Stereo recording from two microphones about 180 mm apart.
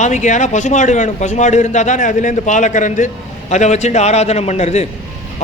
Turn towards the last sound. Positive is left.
turn(degrees=40)  # may be behind; listen again after turning